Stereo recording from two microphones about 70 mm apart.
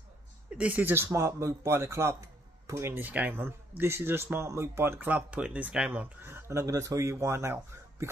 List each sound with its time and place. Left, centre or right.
0.5 s speech: centre
0.9 s speech: right
3.0 s speech: right
6.2 s speech: right